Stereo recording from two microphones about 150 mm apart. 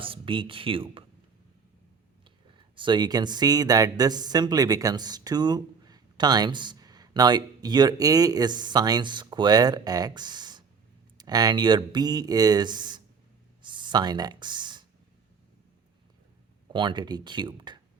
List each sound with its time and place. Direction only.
0.0 s speech: 35° right (ahead or behind)
2.7 s speech: 30° right (ahead or behind)
13.6 s a sound: 30° right (ahead or behind)
16.7 s speech: 30° right (ahead or behind)